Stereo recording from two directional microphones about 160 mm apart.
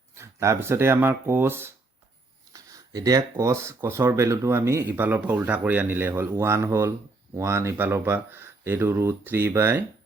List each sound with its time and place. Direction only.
0.1 s speech: 20° right (ahead or behind)